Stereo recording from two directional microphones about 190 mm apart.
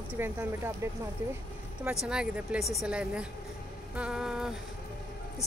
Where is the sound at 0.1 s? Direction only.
10° right (ahead or behind).